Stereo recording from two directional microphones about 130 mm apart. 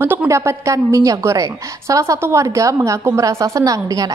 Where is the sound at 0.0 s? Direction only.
15° right (ahead or behind).